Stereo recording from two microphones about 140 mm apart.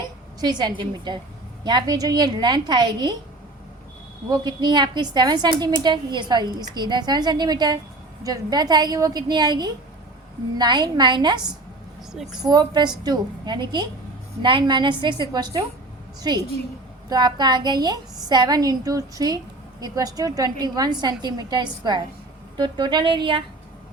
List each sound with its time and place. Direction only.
0.3 s a woman's voice: 30° right (ahead or behind)
4.3 s a woman's voice: 30° right (ahead or behind)
12.1 s a woman's voice: 5° right (ahead or behind)
12.4 s a woman's voice: 30° right (ahead or behind)